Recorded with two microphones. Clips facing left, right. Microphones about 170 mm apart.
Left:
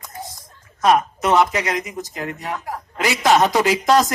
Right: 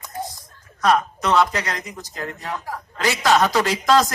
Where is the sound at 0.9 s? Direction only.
20° left (ahead or behind).